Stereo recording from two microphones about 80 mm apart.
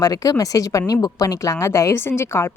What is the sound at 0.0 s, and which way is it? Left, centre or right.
Speech, left.